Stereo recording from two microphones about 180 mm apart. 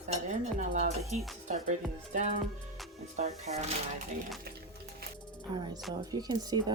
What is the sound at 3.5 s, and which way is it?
Speech, 35° right (ahead or behind).